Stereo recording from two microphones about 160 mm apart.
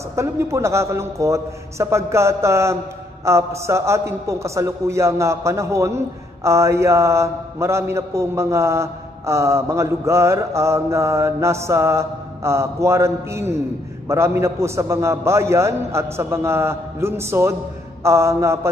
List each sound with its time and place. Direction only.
0.1 s a man's voice: 15° right (ahead or behind)